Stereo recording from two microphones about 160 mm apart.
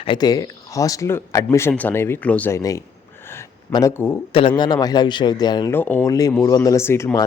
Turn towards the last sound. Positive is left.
turn(degrees=15)  # may be behind; listen again after turning